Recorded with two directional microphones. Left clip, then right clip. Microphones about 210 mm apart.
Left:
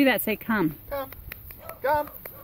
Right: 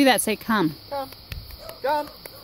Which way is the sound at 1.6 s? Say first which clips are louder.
Even; 30° right (ahead or behind).